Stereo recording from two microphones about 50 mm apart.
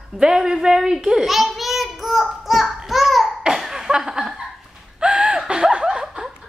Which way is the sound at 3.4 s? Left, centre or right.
Centre.